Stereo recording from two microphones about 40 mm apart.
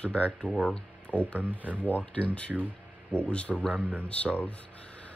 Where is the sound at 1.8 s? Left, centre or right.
Left.